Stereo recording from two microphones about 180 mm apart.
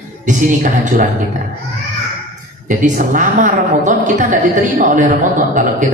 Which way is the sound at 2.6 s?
45° right (ahead or behind).